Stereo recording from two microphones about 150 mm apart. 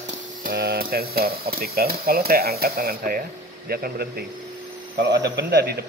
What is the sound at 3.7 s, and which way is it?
Speech, 90° right.